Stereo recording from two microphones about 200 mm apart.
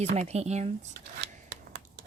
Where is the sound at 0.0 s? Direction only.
30° right (ahead or behind).